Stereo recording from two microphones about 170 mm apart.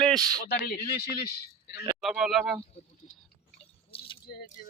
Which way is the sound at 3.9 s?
35° left (ahead or behind).